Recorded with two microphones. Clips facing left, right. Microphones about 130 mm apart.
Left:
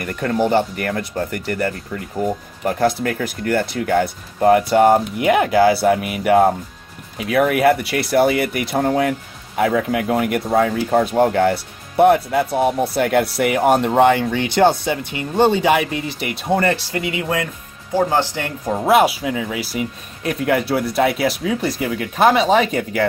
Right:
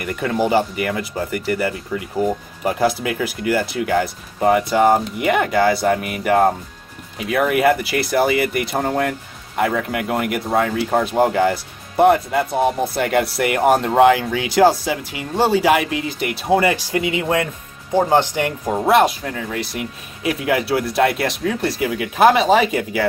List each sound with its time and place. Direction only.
0.0 s speech: centre (ahead or behind)
18.8 s speech: centre (ahead or behind)